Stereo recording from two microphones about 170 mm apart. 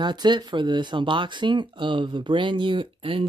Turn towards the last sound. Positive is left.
turn(degrees=-30)  # may be behind; listen again after turning